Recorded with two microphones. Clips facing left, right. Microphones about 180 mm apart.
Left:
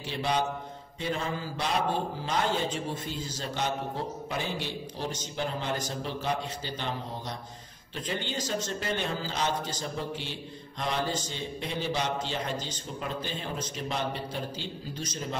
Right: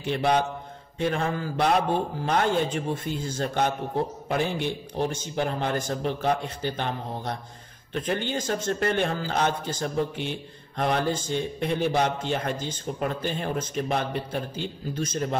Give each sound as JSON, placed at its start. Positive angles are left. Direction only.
{"t": 0.0, "sound": "a man's voice", "side_deg": -55}